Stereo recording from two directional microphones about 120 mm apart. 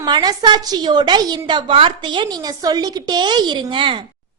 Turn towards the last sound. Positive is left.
turn(degrees=-45)  # may be behind; listen again after turning